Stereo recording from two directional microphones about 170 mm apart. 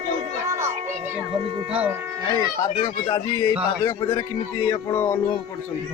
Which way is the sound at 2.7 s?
30° left (ahead or behind).